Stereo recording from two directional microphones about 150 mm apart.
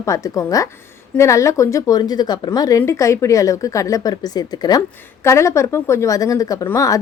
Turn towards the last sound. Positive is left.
turn(degrees=20)  # may be behind; listen again after turning